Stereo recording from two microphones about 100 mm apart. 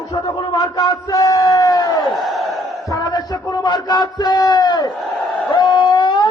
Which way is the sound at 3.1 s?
45° left (ahead or behind).